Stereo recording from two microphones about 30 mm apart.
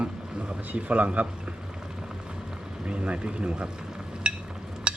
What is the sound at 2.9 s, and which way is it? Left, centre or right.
Speech, right.